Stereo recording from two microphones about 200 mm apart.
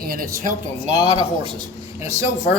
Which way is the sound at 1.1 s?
30° right (ahead or behind).